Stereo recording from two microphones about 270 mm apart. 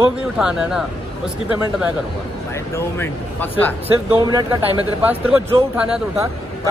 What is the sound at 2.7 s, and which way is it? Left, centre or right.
Speech, centre.